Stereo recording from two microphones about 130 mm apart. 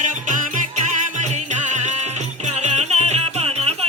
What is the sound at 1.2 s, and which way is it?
Music, 65° right (ahead or behind).